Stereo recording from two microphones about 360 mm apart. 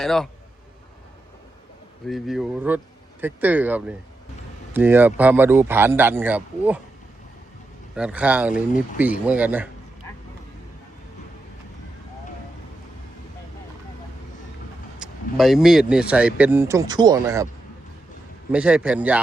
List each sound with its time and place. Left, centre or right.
0.0 s speech: centre
2.0 s speech: centre
7.9 s speech: centre
8.5 s speech: left
9.2 s speech: centre
14.9 s speech: centre
18.5 s speech: centre